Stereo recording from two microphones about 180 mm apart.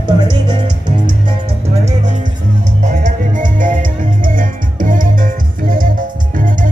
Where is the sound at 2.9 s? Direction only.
45° right (ahead or behind).